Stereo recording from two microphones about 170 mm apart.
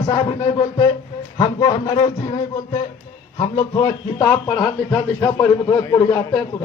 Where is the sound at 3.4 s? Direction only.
30° left (ahead or behind).